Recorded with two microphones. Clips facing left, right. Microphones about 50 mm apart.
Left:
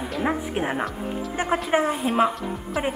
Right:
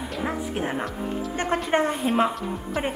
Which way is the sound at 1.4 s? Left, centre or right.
Centre.